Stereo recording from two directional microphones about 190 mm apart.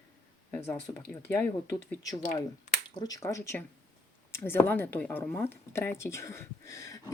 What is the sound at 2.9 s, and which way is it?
A woman's voice, 20° left (ahead or behind).